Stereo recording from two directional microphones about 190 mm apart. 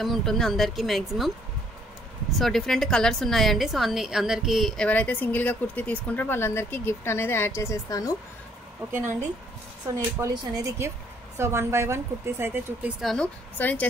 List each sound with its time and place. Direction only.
0.0 s speech: centre (ahead or behind)
2.3 s a woman's voice: centre (ahead or behind); by 8.2 s 20° left (ahead or behind)
9.8 s a woman's voice: 20° right (ahead or behind)
13.0 s speech: 5° left (ahead or behind)